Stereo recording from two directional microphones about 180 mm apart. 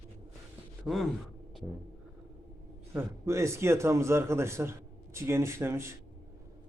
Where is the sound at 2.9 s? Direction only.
15° right (ahead or behind).